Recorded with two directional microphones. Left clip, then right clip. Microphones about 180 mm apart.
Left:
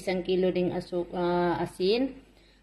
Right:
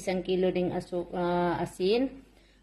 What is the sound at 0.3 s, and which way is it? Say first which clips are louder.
A woman's voice: left 1 dB; 5° right (ahead or behind).